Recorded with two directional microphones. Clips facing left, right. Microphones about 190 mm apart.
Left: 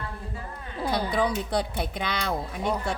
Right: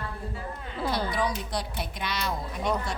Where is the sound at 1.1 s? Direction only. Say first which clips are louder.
Left 4 dB; 60° left (ahead or behind).